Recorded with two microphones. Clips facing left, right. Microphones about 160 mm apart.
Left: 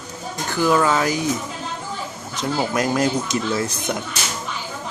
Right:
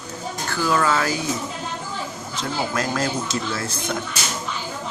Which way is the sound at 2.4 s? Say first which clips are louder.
Left 4 dB; 15° left (ahead or behind).